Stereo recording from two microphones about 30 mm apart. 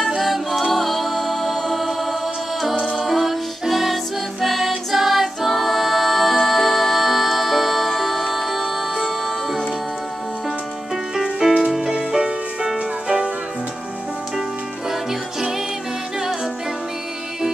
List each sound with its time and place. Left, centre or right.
0.2 s music: centre
3.0 s music: centre
11.4 s music: centre
12.7 s music: right